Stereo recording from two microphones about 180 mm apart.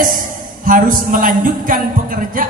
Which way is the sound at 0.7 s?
50° right (ahead or behind).